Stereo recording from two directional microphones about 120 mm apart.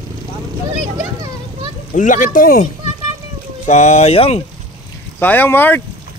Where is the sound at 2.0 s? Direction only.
90° left; by 4.4 s 60° left (ahead or behind).